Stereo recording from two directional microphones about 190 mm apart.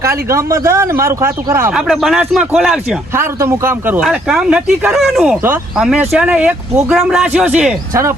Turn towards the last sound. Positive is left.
turn(degrees=-5)  # may be behind; listen again after turning